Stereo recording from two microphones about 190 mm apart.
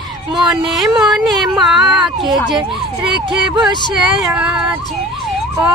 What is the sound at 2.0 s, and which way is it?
Speech, 25° right (ahead or behind).